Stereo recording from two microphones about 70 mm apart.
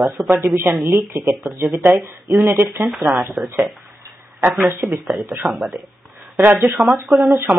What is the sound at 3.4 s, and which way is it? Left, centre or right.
Speech, centre.